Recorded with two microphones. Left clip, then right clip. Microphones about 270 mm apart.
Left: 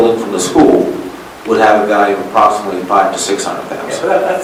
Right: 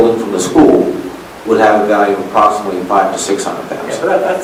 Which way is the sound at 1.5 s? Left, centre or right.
Centre.